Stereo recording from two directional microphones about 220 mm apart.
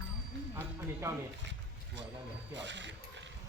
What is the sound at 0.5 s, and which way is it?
Speech, 10° right (ahead or behind).